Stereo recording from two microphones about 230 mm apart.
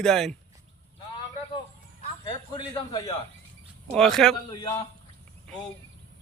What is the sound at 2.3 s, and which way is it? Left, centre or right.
Speech, centre.